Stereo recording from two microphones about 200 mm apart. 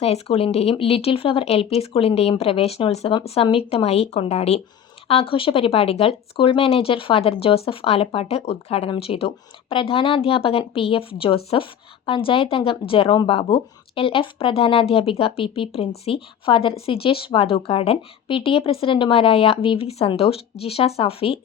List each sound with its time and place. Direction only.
0.0 s a woman's voice: 30° left (ahead or behind)